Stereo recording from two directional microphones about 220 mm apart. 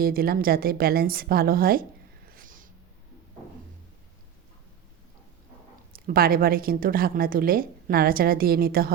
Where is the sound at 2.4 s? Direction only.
40° right (ahead or behind).